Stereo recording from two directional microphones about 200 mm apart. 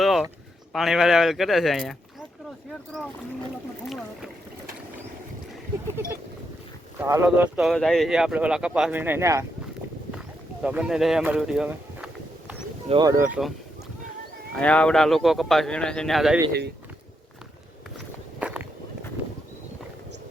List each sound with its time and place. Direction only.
0.0 s a sound: centre (ahead or behind)
0.7 s speech: centre (ahead or behind)
3.8 s speech: centre (ahead or behind)
7.0 s speech: 15° right (ahead or behind)
10.1 s a sound: 5° right (ahead or behind)
12.9 s speech: 20° right (ahead or behind)
14.5 s speech: 5° left (ahead or behind)
16.5 s speech: 55° right (ahead or behind)
18.3 s walk: 5° right (ahead or behind)